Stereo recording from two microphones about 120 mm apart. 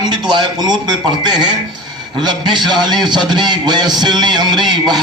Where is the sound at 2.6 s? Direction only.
35° right (ahead or behind).